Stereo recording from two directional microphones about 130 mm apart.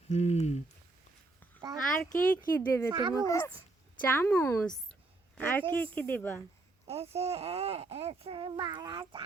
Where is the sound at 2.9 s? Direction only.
35° right (ahead or behind).